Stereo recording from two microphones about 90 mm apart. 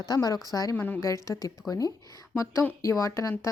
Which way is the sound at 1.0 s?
35° left (ahead or behind).